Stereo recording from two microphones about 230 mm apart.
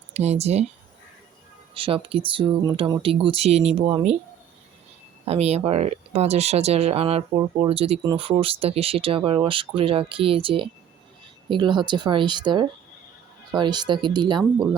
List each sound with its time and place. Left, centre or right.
0.1 s speech: right
1.7 s speech: right
5.2 s speech: right